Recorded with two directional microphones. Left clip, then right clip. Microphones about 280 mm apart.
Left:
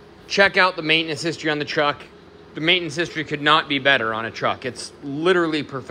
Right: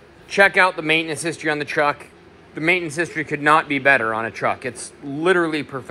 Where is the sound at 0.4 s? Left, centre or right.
Centre.